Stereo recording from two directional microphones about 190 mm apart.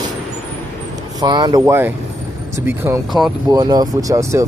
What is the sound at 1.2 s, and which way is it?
Speech, 25° right (ahead or behind).